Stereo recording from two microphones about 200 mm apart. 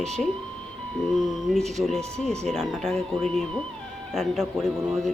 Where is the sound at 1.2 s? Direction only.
Centre (ahead or behind).